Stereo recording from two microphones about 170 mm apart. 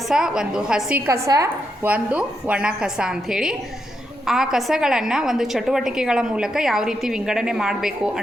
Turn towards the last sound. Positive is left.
turn(degrees=-5)  # may be behind; listen again after turning